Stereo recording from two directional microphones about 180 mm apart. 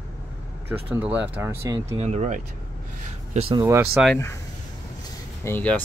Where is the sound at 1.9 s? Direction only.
35° right (ahead or behind).